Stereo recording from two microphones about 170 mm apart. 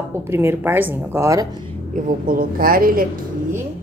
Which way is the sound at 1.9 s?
50° right (ahead or behind).